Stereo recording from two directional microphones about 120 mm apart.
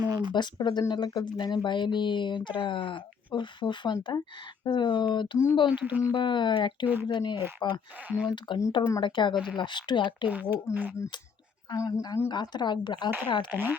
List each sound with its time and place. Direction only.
0.0 s a sound: 35° right (ahead or behind)
0.3 s speech: 40° left (ahead or behind)
5.8 s speech: 15° right (ahead or behind)
6.1 s speech: 40° left (ahead or behind)
6.8 s speech: 15° right (ahead or behind)
7.1 s speech: 40° left (ahead or behind)
8.0 s speech: 10° right (ahead or behind)
8.4 s speech: 35° left (ahead or behind)
11.7 s speech: 30° left (ahead or behind)
12.3 s speech: 40° left (ahead or behind)